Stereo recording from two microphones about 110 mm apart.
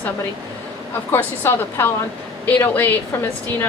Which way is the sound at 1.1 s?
20° left (ahead or behind).